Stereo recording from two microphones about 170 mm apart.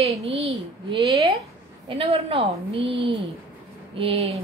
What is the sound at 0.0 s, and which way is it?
A woman's voice, 35° right (ahead or behind).